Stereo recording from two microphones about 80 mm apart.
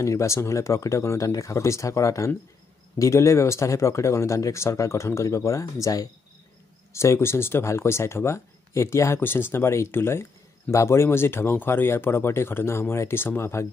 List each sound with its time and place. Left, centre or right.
0.0 s speech: left